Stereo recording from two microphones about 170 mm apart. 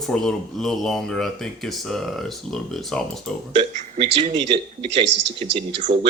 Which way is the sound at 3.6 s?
40° right (ahead or behind).